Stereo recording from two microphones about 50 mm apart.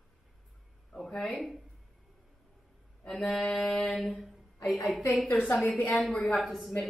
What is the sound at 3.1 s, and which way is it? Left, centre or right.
Mantra, centre.